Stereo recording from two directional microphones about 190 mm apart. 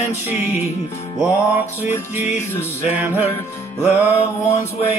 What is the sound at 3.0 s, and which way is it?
Music, 10° right (ahead or behind).